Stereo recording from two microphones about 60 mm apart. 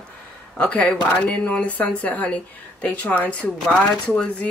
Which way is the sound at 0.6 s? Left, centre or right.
Left.